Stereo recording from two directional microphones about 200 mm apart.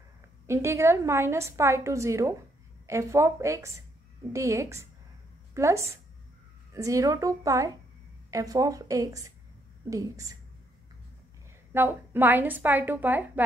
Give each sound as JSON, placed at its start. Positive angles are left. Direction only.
{"t": 0.5, "sound": "a woman's voice", "side_deg": -15}
{"t": 11.7, "sound": "a woman's voice", "side_deg": -10}